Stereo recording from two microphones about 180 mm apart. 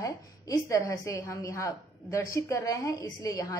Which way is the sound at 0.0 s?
20° left (ahead or behind).